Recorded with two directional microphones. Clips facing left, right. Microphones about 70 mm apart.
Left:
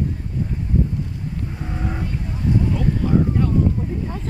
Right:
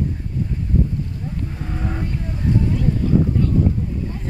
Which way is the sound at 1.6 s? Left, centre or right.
Centre.